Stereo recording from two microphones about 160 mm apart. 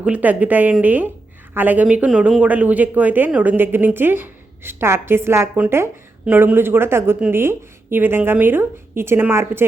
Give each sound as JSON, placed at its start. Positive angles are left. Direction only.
{"t": 0.0, "sound": "speech", "side_deg": -10}